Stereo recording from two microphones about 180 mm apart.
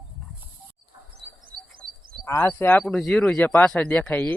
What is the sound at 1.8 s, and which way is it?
Frog, 55° right (ahead or behind).